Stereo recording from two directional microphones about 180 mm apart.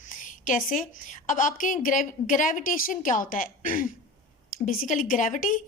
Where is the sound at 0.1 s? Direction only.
45° left (ahead or behind).